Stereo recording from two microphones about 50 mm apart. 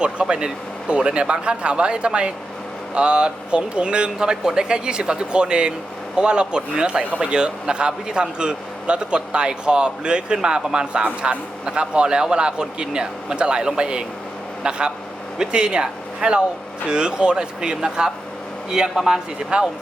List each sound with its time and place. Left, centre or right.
0.0 s speech: centre